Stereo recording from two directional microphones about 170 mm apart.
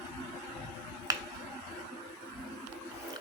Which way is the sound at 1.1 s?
20° right (ahead or behind).